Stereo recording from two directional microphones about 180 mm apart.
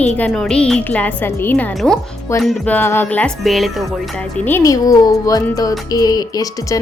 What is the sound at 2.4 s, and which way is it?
Music, 10° left (ahead or behind).